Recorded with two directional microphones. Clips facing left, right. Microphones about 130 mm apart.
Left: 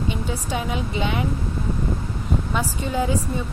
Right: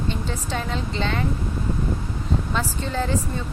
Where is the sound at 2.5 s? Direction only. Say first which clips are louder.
Left 1 dB; 10° left (ahead or behind).